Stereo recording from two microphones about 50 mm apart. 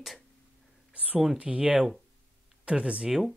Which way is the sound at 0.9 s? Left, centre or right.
Right.